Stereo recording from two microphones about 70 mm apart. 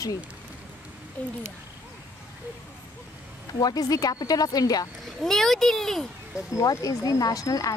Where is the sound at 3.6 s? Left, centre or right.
Left.